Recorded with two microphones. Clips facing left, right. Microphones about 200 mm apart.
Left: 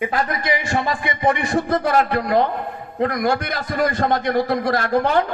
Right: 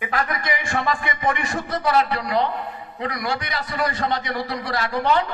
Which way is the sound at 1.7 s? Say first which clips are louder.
Even; 50° left (ahead or behind).